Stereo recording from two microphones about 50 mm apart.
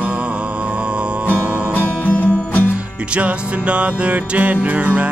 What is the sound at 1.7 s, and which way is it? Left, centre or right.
Music, left.